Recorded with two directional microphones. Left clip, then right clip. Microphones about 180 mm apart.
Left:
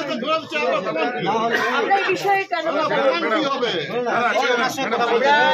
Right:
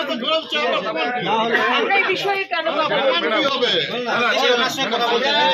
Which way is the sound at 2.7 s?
35° left (ahead or behind).